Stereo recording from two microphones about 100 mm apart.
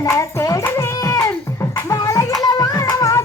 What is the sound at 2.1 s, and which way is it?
Music, 35° left (ahead or behind).